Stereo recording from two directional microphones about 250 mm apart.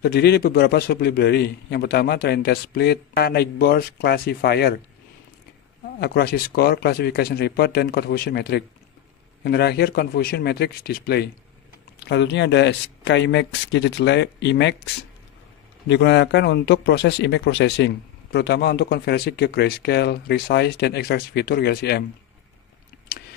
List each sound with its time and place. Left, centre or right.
0.0 s speech: left
5.9 s speech: left
15.9 s speech: left
23.1 s a sound: left